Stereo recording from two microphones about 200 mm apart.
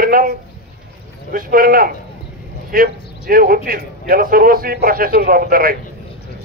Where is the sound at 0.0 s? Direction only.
45° right (ahead or behind).